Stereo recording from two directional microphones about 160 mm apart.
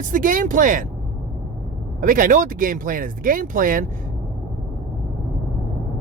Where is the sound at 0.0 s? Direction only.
55° right (ahead or behind).